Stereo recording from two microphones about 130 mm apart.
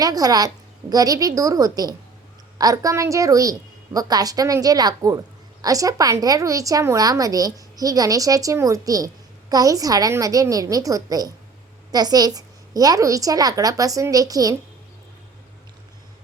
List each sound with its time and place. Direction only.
0.0 s a woman's voice: 30° right (ahead or behind)